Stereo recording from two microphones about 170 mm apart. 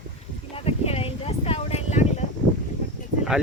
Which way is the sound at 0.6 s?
35° left (ahead or behind).